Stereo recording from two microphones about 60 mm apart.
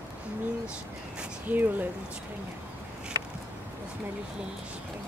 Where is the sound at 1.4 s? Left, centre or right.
Right.